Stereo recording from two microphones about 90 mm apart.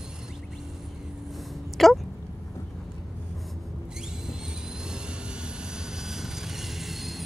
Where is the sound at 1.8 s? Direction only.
5° left (ahead or behind).